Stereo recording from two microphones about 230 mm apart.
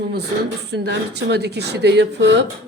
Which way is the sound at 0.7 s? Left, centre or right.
Right.